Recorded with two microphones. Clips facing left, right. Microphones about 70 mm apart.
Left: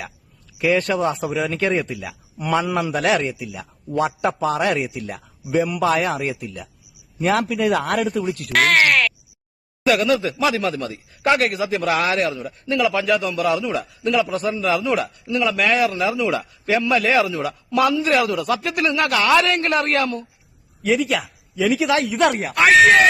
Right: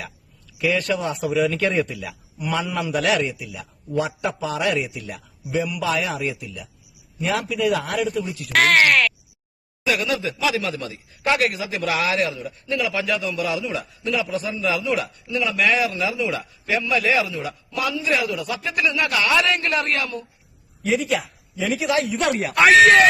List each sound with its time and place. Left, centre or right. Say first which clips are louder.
0.6 s a man's voice: left 3 dB; left
7.8 s a man's voice: left 4 dB; left
8.5 s speech: even; centre
9.8 s a man's voice: left 5 dB; left
17.3 s speech: left 5 dB; left
17.7 s a man's voice: left 6 dB; left
18.9 s a man's voice: left 4 dB; left
20.8 s a man's voice: left 2 dB; left
22.0 s speech: left 6 dB; left
22.4 s speech: right 1 dB; centre